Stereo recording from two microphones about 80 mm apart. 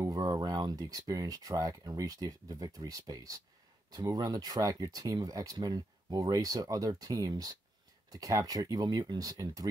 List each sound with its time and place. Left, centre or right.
0.0 s speech: right